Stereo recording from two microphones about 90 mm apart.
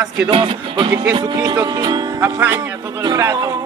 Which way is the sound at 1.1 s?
50° right (ahead or behind).